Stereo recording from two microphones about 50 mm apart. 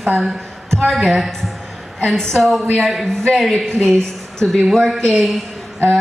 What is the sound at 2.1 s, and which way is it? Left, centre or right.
Speech, centre.